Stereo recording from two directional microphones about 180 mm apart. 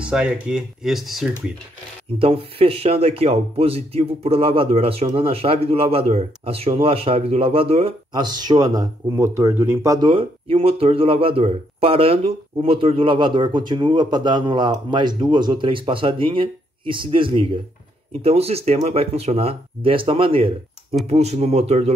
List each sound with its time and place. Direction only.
0.0 s speech: 5° right (ahead or behind)
2.1 s speech: 30° right (ahead or behind); by 9.9 s 15° right (ahead or behind)
10.0 s speech: 30° right (ahead or behind)